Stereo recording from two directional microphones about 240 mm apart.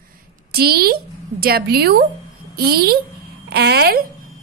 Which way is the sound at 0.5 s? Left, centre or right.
Right.